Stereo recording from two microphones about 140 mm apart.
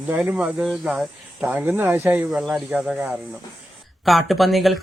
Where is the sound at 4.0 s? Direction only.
Centre (ahead or behind).